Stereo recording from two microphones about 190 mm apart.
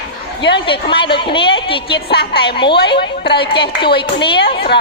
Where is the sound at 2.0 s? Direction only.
60° left (ahead or behind).